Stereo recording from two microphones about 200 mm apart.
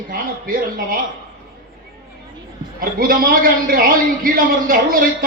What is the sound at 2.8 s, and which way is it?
A man's voice, 45° right (ahead or behind).